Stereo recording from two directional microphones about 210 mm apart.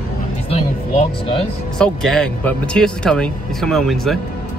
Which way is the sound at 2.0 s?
5° left (ahead or behind).